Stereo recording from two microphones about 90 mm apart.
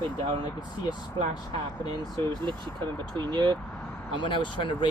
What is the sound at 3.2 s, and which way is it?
Speech, 60° right (ahead or behind).